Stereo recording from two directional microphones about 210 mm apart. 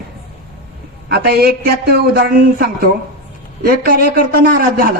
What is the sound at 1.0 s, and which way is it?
Speech, 50° right (ahead or behind).